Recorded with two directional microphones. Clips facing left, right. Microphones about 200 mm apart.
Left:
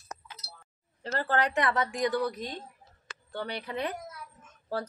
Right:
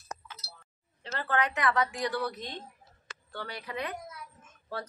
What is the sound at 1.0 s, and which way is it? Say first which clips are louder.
Speech: left 2 dB; 45° left (ahead or behind).